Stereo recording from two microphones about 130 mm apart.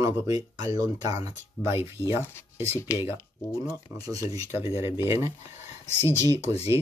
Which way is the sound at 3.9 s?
30° right (ahead or behind).